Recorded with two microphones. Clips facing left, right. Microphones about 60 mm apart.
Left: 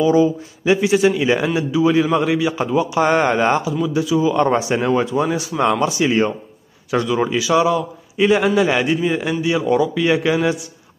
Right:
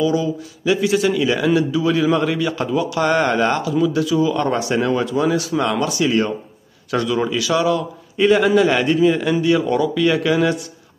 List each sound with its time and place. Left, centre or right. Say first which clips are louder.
0.0 s a man's voice: left 4 dB; left
8.2 s a man's voice: right 1 dB; centre